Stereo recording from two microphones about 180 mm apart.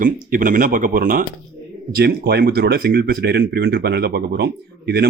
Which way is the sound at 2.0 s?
60° right (ahead or behind).